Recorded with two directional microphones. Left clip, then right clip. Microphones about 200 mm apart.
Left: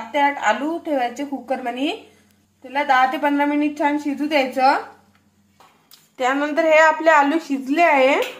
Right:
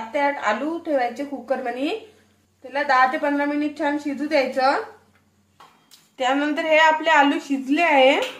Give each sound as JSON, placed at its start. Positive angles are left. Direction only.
{"t": 0.1, "sound": "a woman's voice", "side_deg": 20}
{"t": 5.9, "sound": "a woman's voice", "side_deg": 20}